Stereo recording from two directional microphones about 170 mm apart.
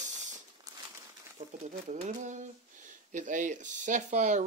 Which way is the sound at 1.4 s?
45° right (ahead or behind).